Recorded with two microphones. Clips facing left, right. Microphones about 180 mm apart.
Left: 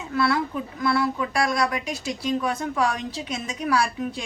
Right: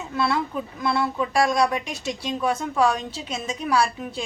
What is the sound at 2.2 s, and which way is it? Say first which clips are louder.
A woman's voice: even; 25° right (ahead or behind).